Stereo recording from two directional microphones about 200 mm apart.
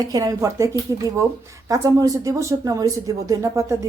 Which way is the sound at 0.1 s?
20° right (ahead or behind).